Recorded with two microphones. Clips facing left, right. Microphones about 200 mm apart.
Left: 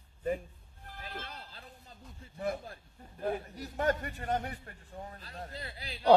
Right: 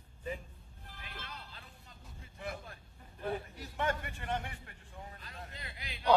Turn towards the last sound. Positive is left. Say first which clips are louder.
# left 6 dB
turn(degrees=35)  # may be behind; listen again after turning